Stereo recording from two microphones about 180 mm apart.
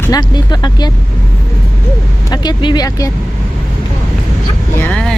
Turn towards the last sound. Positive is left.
turn(degrees=5)  # may be behind; listen again after turning